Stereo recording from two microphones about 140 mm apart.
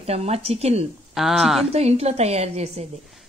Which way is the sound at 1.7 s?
45° right (ahead or behind).